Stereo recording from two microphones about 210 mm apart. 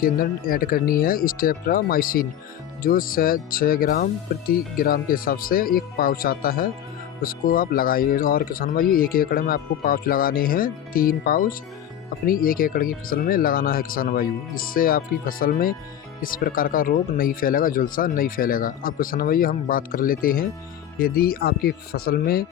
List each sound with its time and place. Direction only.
0.0 s speech: 45° left (ahead or behind)